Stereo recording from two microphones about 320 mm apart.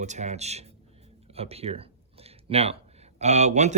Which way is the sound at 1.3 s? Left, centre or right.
Centre.